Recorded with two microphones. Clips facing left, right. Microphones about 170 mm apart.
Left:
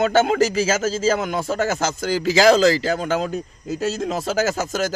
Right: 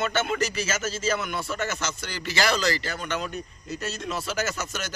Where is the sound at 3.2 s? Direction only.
90° left.